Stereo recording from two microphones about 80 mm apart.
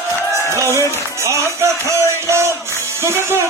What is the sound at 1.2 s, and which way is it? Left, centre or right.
Music, right.